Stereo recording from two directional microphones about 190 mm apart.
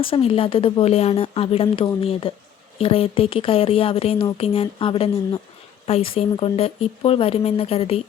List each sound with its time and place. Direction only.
0.0 s a woman's voice: 30° left (ahead or behind)